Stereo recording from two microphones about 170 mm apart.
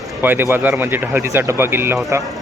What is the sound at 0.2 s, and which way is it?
Speech, 10° right (ahead or behind).